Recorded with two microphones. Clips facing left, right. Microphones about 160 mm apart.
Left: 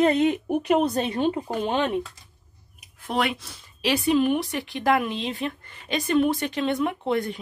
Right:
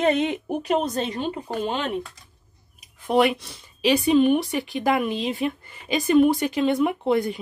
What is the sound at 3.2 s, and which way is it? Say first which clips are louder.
Speech: right 6 dB; centre (ahead or behind).